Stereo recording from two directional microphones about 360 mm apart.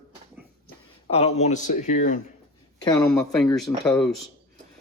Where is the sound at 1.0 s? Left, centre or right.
Centre.